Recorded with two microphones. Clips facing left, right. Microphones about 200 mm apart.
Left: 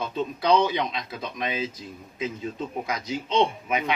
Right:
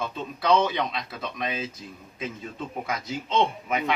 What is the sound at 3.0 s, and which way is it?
Speech, 15° left (ahead or behind).